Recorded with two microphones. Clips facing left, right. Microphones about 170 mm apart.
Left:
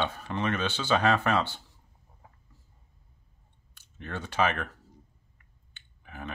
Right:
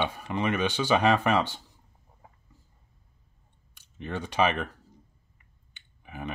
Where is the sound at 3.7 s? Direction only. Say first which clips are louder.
Right 4 dB; 15° right (ahead or behind).